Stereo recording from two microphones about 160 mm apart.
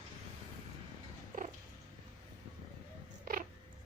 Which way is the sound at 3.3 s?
65° right (ahead or behind).